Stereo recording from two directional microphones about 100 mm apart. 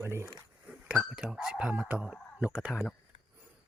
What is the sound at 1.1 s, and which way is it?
Speech, 10° right (ahead or behind).